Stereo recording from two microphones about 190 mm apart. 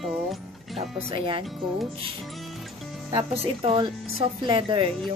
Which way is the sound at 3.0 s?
30° right (ahead or behind).